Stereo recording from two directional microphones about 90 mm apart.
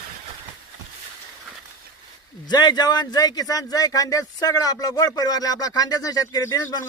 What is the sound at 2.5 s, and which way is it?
Speech, 50° left (ahead or behind).